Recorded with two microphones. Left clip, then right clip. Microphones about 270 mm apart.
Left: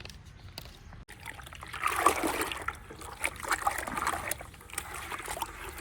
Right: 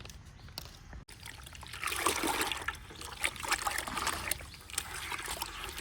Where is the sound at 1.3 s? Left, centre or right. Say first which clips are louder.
Left 4 dB; centre.